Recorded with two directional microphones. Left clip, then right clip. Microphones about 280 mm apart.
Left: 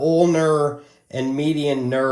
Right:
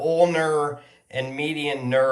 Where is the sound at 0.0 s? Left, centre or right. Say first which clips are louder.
Left 2 dB; centre.